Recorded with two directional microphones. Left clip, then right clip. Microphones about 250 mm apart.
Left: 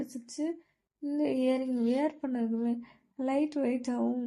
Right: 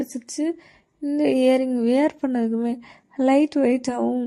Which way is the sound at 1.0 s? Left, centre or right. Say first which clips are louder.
Right 11 dB; right.